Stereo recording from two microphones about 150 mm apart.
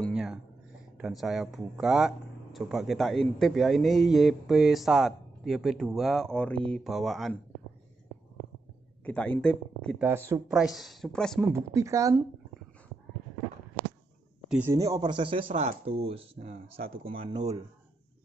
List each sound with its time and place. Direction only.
0.1 s a sound: 5° right (ahead or behind)
0.9 s speech: centre (ahead or behind)
9.0 s speech: 10° left (ahead or behind)
9.9 s speech: 15° right (ahead or behind)
10.5 s speech: centre (ahead or behind)
11.5 s speech: 20° right (ahead or behind)
14.6 s speech: 20° right (ahead or behind)